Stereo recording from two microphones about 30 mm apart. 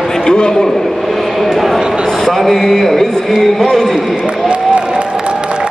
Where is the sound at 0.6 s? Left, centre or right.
Centre.